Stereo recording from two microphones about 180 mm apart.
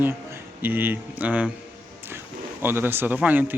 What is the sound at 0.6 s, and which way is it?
Speech, 10° right (ahead or behind).